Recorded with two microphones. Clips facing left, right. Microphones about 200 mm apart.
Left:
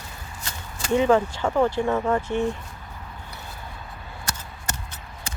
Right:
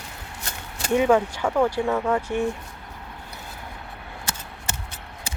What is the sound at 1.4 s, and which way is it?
Speech, 5° left (ahead or behind).